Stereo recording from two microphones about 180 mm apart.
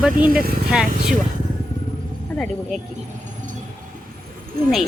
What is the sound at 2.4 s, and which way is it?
Speech, centre (ahead or behind).